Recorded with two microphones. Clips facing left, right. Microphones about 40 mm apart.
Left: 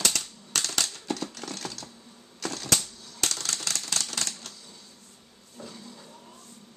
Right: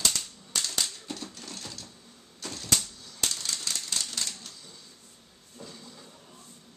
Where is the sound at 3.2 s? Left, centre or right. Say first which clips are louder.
Left 2 dB; left.